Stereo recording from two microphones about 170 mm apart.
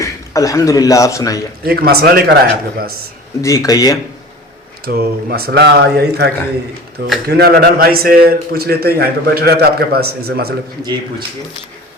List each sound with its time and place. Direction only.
0.0 s a man's voice: 20° left (ahead or behind)
1.6 s a man's voice: 65° right (ahead or behind)
3.4 s speech: 20° left (ahead or behind)
4.9 s a man's voice: 65° right (ahead or behind)